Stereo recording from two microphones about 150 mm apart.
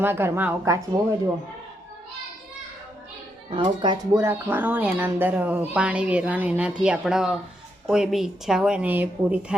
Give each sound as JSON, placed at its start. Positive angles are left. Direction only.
{"t": 0.0, "sound": "speech", "side_deg": -15}
{"t": 3.5, "sound": "speech", "side_deg": -35}
{"t": 4.1, "sound": "speech", "side_deg": -15}